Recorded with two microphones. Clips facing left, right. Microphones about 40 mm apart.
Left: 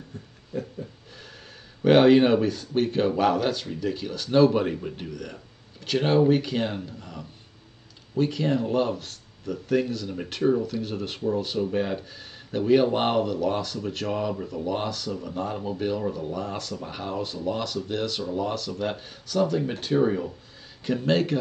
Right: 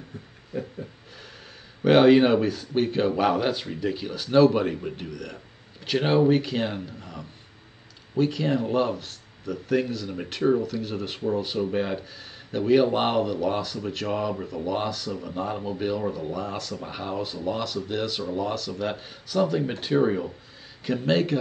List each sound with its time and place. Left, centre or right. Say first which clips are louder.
0.5 s a sound: even; centre
1.9 s speech: even; centre
5.9 s speech: even; centre